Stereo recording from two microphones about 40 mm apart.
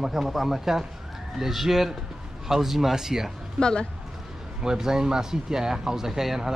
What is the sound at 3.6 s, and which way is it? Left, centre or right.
Speech, left.